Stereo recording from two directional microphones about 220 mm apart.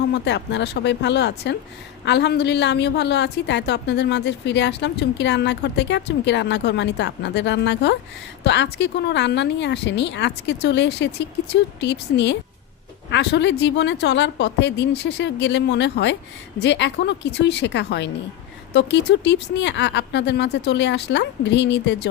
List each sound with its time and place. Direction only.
0.1 s a woman's voice: 50° left (ahead or behind)